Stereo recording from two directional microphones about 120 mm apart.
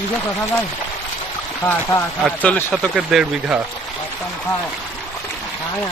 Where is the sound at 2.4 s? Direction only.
15° left (ahead or behind).